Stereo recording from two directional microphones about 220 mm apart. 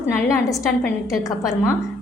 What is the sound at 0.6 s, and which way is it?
Speech, centre (ahead or behind).